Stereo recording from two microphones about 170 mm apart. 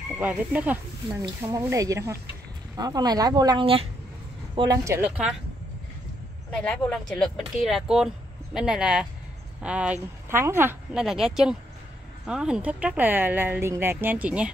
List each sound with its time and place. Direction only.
0.2 s speech: 10° right (ahead or behind)
1.2 s speech: 20° right (ahead or behind)
4.6 s speech: 20° right (ahead or behind)
6.6 s speech: 5° left (ahead or behind)